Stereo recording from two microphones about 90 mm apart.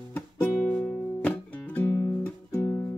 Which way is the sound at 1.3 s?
25° left (ahead or behind).